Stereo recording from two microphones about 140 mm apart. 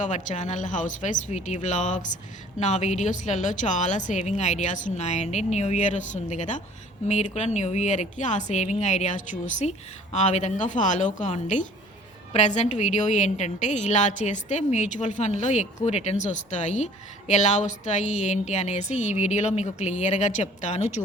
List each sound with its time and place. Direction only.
0.0 s a woman's voice: 60° left (ahead or behind)